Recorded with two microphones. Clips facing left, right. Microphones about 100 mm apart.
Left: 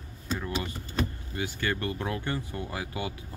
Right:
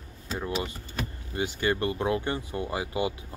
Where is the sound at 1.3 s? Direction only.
20° right (ahead or behind).